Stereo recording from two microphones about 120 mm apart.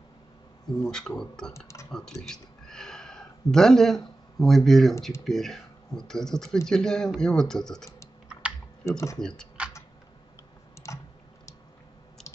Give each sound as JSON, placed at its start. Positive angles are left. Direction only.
{"t": 0.7, "sound": "speech", "side_deg": 5}
{"t": 8.3, "sound": "typing", "side_deg": -10}
{"t": 8.8, "sound": "speech", "side_deg": 25}
{"t": 9.6, "sound": "computer keyboard", "side_deg": -10}